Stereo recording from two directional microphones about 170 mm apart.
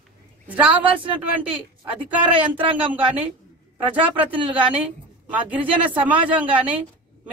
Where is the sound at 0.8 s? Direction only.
30° right (ahead or behind).